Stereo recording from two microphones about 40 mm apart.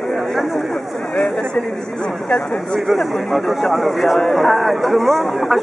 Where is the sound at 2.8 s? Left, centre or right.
Centre.